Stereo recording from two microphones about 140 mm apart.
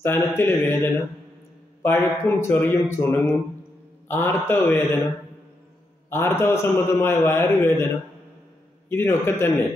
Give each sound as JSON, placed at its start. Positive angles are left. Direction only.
{"t": 0.0, "sound": "a man's voice", "side_deg": 15}
{"t": 6.0, "sound": "a man's voice", "side_deg": 15}
{"t": 8.8, "sound": "a man's voice", "side_deg": 15}